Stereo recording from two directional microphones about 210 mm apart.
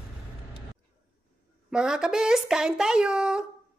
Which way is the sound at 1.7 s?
5° right (ahead or behind).